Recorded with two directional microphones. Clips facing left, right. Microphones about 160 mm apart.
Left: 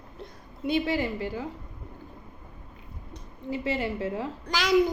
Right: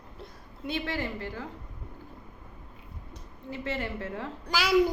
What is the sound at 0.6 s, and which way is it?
Speech, 15° left (ahead or behind).